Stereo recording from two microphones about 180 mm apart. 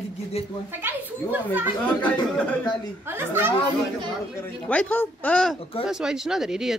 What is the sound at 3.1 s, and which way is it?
Speech, 15° right (ahead or behind).